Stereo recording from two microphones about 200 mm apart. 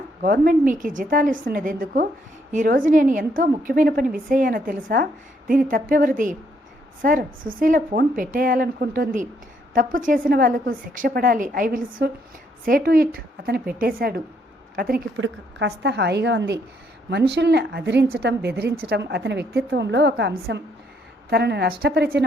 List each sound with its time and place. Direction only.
0.2 s a woman's voice: 45° right (ahead or behind)
15.2 s a woman's voice: 60° right (ahead or behind)